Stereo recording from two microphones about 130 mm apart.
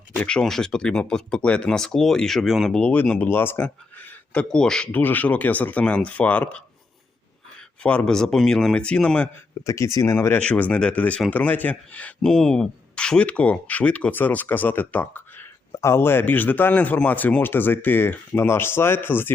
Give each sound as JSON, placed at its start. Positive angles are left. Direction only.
{"t": 0.2, "sound": "speech", "side_deg": 5}
{"t": 7.8, "sound": "speech", "side_deg": 10}
{"t": 9.6, "sound": "speech", "side_deg": 25}
{"t": 10.2, "sound": "speech", "side_deg": 15}